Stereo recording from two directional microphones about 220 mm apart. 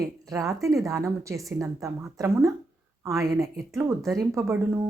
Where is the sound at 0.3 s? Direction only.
15° right (ahead or behind).